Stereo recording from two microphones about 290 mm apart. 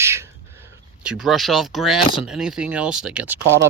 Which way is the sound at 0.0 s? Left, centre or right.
Centre.